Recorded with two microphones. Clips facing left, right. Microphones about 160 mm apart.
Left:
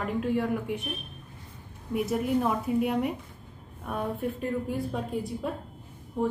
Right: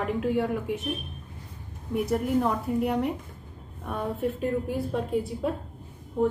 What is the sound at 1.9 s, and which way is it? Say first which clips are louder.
A woman's voice: right 1 dB; centre (ahead or behind).